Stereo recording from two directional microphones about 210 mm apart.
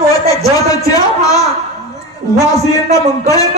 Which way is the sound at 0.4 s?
15° left (ahead or behind).